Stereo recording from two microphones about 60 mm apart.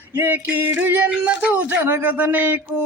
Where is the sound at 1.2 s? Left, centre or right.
Right.